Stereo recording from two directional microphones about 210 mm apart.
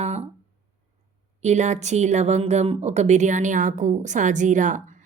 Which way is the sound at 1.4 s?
35° right (ahead or behind).